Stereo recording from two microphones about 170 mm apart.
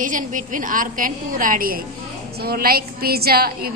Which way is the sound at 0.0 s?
50° right (ahead or behind).